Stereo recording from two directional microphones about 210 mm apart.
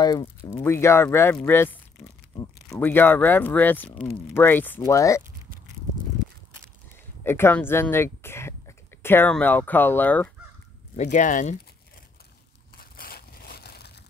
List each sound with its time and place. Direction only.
0.0 s speech: 15° left (ahead or behind)
7.2 s speech: 10° left (ahead or behind)
11.0 s speech: 35° left (ahead or behind)
12.7 s crushing: 45° left (ahead or behind)